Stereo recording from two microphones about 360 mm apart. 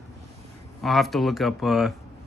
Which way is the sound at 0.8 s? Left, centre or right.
Centre.